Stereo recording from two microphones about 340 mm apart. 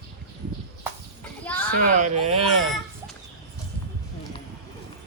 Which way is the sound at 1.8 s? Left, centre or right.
Right.